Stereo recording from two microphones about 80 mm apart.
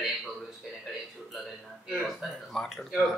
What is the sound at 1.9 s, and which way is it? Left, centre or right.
Speech, centre.